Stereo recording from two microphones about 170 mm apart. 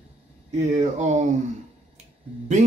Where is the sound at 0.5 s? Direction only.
45° right (ahead or behind).